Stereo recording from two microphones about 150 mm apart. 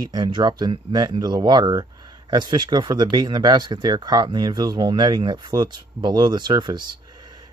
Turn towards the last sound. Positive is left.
turn(degrees=-30)  # may be behind; listen again after turning